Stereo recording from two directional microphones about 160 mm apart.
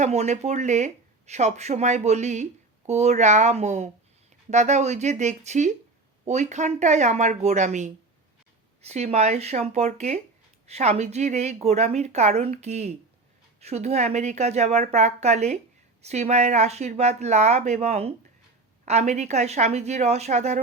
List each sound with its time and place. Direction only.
0.0 s speech: 45° right (ahead or behind)